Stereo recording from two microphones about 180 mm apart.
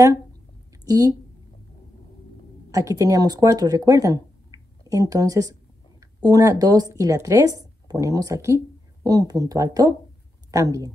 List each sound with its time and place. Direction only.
0.8 s a woman's voice: 20° right (ahead or behind)
2.7 s speech: 15° right (ahead or behind)